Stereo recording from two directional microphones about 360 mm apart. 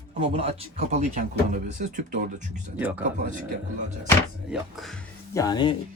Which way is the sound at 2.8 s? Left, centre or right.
Centre.